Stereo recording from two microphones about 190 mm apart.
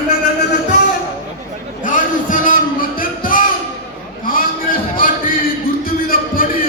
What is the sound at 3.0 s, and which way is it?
Music, 45° left (ahead or behind).